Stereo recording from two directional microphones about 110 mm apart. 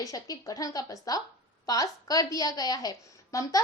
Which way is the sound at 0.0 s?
35° left (ahead or behind).